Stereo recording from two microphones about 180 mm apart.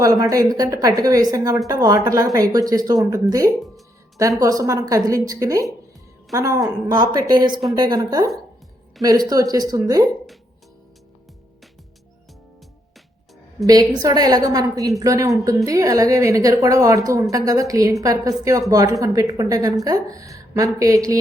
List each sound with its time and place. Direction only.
0.0 s a woman's voice: 20° right (ahead or behind)
13.7 s a woman's voice: 20° right (ahead or behind)